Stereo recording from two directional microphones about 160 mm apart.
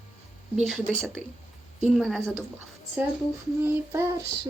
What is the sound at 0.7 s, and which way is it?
Speech, centre (ahead or behind).